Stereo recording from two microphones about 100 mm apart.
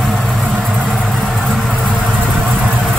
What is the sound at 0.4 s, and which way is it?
Vehicle, 20° right (ahead or behind).